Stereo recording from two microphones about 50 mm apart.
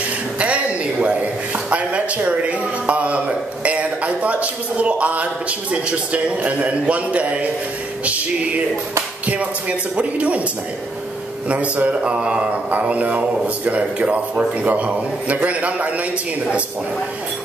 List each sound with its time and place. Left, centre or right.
0.4 s a sound: right
1.0 s a man's voice: right
9.2 s a man's voice: right
11.4 s a man's voice: right